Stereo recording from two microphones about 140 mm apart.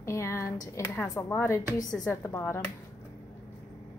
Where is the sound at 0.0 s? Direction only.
20° left (ahead or behind).